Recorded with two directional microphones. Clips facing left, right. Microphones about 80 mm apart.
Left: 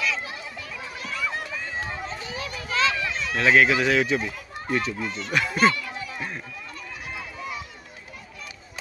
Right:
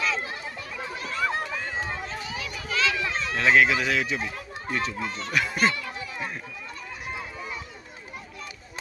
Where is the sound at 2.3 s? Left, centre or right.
Left.